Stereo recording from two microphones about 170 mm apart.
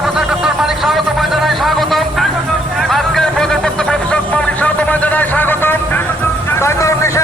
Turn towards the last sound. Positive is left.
turn(degrees=15)  # may be behind; listen again after turning